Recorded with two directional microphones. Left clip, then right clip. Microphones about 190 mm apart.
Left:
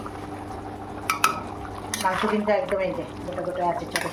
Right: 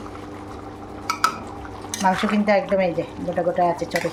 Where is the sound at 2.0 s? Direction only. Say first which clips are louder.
Right 3 dB; 55° right (ahead or behind).